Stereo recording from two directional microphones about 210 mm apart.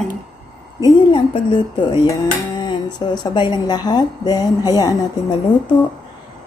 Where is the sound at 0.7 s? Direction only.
20° left (ahead or behind).